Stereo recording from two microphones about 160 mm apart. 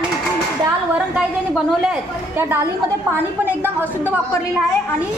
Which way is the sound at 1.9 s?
15° right (ahead or behind).